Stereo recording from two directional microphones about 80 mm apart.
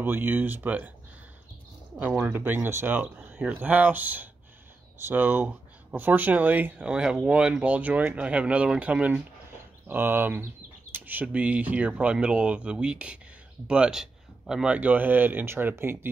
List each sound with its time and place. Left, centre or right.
0.0 s speech: right
2.0 s speech: right
6.9 s speech: centre
9.8 s speech: right; by 14.8 s centre
14.8 s speech: right